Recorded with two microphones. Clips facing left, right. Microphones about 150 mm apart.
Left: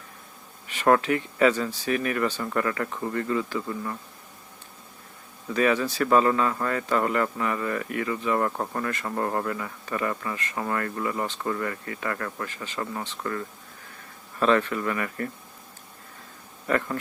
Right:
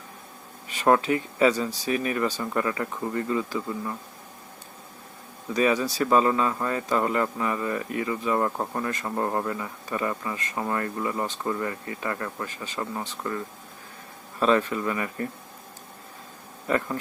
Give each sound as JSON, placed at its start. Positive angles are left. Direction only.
{"t": 1.0, "sound": "speech", "side_deg": -25}
{"t": 2.2, "sound": "speech", "side_deg": -10}
{"t": 5.5, "sound": "speech", "side_deg": -15}
{"t": 16.6, "sound": "speech", "side_deg": -15}